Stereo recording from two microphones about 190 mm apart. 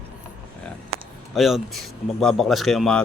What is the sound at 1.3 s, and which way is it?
A man's voice, centre (ahead or behind).